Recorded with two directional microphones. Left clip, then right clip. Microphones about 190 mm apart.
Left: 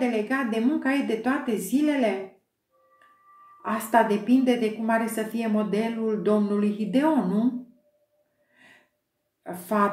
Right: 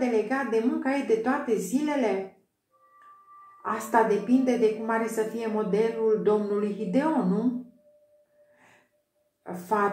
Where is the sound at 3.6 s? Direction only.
35° left (ahead or behind).